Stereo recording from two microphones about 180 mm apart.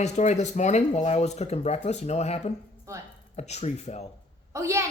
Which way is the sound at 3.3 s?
40° left (ahead or behind).